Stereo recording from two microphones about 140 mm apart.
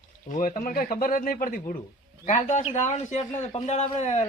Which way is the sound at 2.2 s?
55° left (ahead or behind).